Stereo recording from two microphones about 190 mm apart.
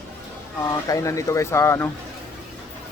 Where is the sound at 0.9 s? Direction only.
15° left (ahead or behind).